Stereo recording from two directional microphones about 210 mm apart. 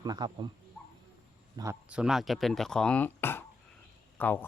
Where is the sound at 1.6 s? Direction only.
10° right (ahead or behind).